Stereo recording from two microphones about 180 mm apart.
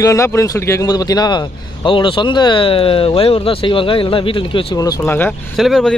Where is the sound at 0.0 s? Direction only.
15° left (ahead or behind).